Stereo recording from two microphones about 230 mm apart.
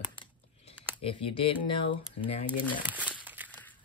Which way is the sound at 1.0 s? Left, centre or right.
Left.